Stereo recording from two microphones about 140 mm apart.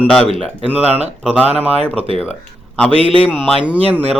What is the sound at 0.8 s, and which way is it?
Speech, 50° right (ahead or behind).